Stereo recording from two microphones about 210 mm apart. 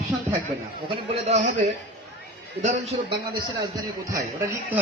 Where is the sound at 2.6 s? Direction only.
30° right (ahead or behind).